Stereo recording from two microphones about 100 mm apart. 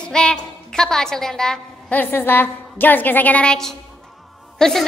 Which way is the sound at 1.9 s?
20° left (ahead or behind).